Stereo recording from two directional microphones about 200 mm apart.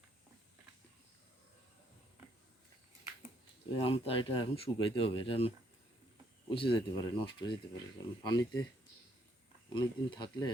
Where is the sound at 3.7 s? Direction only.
30° left (ahead or behind).